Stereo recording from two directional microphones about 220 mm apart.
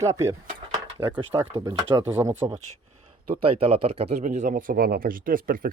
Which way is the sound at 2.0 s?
10° right (ahead or behind).